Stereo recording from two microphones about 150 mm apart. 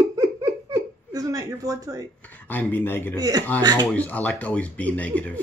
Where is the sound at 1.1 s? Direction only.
25° right (ahead or behind).